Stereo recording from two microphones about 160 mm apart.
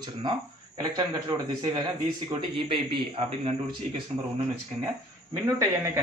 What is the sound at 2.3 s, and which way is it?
A man's voice, 35° right (ahead or behind).